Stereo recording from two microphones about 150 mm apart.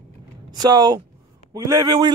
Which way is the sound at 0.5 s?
25° right (ahead or behind).